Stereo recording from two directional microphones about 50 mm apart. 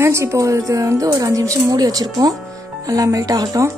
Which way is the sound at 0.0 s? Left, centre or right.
Right.